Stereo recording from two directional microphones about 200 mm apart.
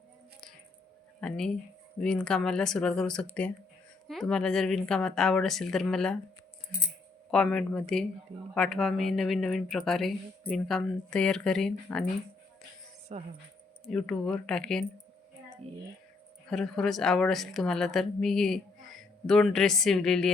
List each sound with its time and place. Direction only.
1.2 s a woman's voice: 5° left (ahead or behind)
7.3 s a woman's voice: 5° left (ahead or behind)
13.1 s speech: 35° right (ahead or behind)
13.8 s a woman's voice: 5° left (ahead or behind)
16.5 s a woman's voice: centre (ahead or behind)